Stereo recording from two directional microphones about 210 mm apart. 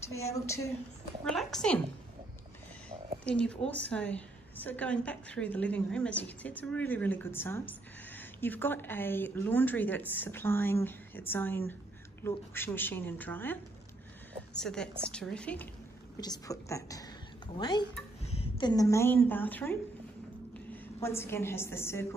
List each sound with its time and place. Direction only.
1.2 s a woman's voice: centre (ahead or behind)
3.3 s a woman's voice: 5° left (ahead or behind)
16.2 s a woman's voice: 15° left (ahead or behind)